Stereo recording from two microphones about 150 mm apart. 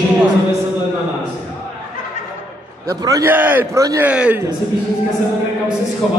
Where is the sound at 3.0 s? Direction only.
25° right (ahead or behind).